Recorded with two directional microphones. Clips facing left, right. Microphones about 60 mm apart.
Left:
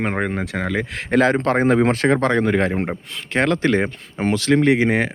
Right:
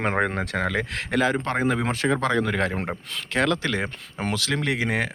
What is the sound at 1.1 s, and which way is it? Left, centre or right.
Speech, left.